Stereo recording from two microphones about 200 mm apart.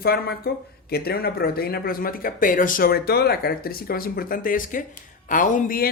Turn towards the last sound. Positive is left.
turn(degrees=40)  # may be behind; listen again after turning